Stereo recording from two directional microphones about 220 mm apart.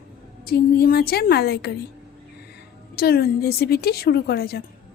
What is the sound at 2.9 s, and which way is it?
Speech, 45° left (ahead or behind).